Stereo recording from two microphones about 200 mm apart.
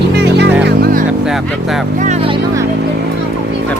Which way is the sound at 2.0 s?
30° right (ahead or behind).